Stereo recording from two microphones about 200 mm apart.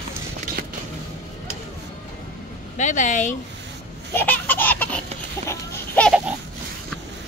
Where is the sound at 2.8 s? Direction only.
40° left (ahead or behind).